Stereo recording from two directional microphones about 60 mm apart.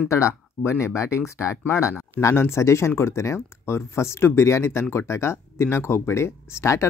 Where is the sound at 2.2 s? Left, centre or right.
Left.